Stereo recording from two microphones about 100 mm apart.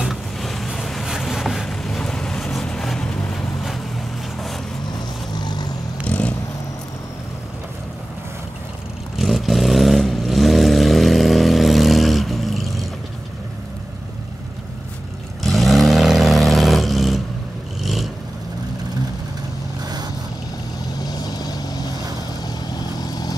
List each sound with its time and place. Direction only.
0.0 s vehicle: centre (ahead or behind)
5.4 s vehicle: 45° left (ahead or behind)
6.0 s vehicle: 10° left (ahead or behind)
9.2 s vehicle: centre (ahead or behind)
15.4 s vehicle: centre (ahead or behind)
19.8 s vehicle: 40° right (ahead or behind)
20.9 s vehicle: 45° left (ahead or behind)